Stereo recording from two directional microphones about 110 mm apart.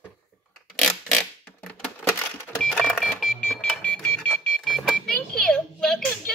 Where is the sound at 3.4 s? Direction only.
10° left (ahead or behind).